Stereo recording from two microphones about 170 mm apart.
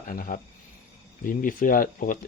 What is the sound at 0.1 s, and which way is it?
Speech, 50° left (ahead or behind).